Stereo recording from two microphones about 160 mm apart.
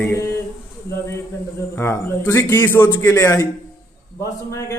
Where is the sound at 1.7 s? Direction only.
15° left (ahead or behind).